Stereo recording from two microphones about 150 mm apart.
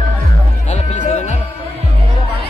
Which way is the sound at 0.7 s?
55° left (ahead or behind).